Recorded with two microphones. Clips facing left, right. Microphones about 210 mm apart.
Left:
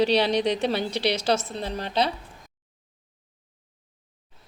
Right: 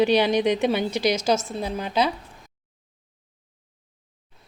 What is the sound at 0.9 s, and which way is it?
Speech, 30° left (ahead or behind).